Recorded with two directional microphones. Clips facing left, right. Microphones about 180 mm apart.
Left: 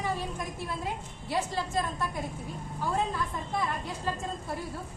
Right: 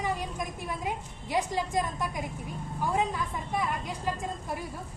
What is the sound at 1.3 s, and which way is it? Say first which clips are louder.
A woman's voice: right 2 dB; 15° right (ahead or behind).